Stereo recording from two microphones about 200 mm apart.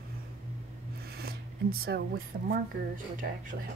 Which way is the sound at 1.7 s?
50° right (ahead or behind).